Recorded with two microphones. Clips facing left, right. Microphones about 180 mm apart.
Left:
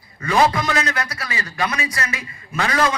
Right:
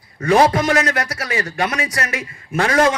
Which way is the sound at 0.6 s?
75° right (ahead or behind).